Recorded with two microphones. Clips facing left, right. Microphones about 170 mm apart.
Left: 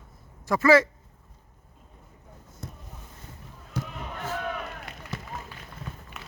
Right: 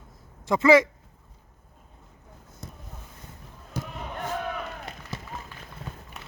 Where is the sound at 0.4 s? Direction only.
20° right (ahead or behind).